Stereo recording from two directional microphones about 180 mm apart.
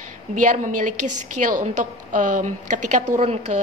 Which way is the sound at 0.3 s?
45° right (ahead or behind).